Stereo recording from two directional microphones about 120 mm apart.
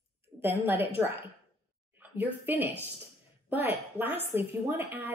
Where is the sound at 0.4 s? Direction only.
15° right (ahead or behind).